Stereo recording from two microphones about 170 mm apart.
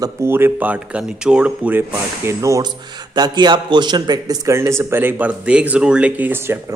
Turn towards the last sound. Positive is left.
turn(degrees=-15)  # may be behind; listen again after turning